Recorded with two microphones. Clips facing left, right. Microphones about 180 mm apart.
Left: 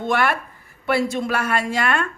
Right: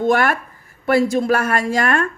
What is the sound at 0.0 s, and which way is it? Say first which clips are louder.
A woman's voice: right 4 dB; 45° right (ahead or behind).